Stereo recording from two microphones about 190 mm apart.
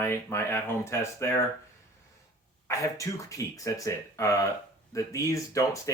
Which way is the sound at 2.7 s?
15° left (ahead or behind).